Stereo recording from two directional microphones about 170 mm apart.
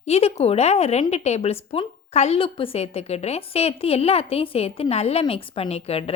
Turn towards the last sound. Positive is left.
turn(degrees=35)  # may be behind; listen again after turning